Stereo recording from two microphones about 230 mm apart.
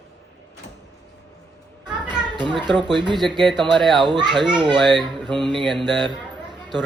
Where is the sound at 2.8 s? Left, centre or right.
Centre.